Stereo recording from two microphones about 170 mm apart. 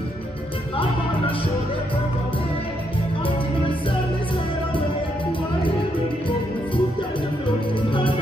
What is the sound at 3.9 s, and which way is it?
Music, 30° left (ahead or behind).